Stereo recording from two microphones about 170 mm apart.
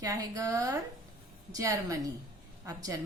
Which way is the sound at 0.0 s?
20° right (ahead or behind).